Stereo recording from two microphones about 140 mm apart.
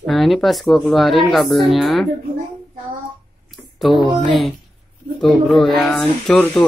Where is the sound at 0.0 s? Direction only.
Centre (ahead or behind).